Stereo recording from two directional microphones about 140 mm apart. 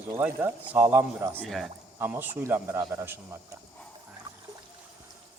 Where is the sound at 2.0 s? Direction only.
15° right (ahead or behind).